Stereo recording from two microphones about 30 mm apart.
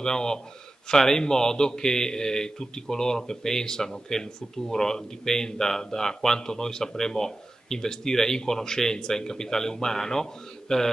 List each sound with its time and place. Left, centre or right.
0.0 s a man's voice: left